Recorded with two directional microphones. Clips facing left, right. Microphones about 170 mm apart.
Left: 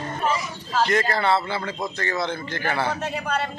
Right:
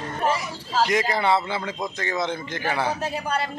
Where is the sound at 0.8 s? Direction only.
10° right (ahead or behind).